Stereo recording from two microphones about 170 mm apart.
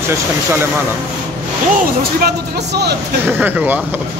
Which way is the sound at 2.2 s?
75° right (ahead or behind).